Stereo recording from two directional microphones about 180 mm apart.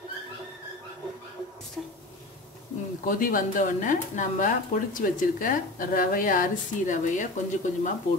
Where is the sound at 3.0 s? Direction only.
50° left (ahead or behind).